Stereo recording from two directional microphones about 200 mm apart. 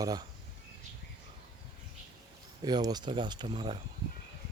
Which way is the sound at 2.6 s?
20° right (ahead or behind).